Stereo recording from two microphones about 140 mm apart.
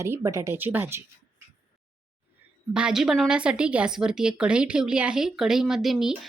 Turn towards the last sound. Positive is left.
turn(degrees=0)  # may be behind; listen again after turning